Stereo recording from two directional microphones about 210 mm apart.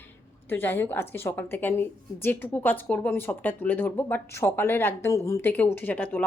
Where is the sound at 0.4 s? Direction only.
10° left (ahead or behind).